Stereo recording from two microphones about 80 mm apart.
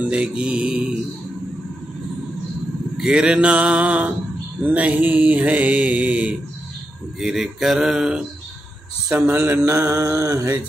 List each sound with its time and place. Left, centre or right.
0.0 s mantra: centre
3.0 s mantra: centre
7.2 s mantra: centre
9.7 s mantra: right